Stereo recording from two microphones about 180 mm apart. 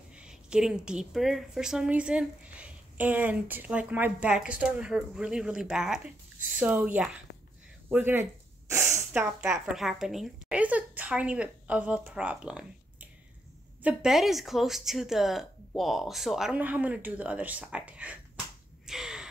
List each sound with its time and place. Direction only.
0.1 s a woman's voice: 5° right (ahead or behind)
18.9 s crow: 5° right (ahead or behind)